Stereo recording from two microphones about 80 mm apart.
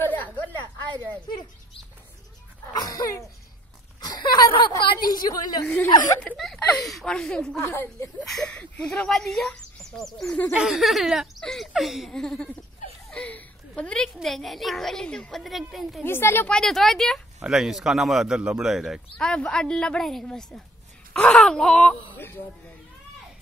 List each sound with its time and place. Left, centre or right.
0.0 s a sound: left
2.7 s music: left
4.0 s a sound: left
6.3 s speech: centre
7.6 s a woman's voice: left
8.2 s speech: centre
12.1 s a woman's voice: centre
15.4 s speech: centre
16.0 s a woman's voice: left
16.4 s speech: centre
17.4 s speech: centre
19.1 s a woman's voice: centre